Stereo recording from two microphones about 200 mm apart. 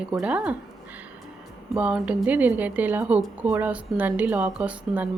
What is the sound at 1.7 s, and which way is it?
A woman's voice, 5° right (ahead or behind).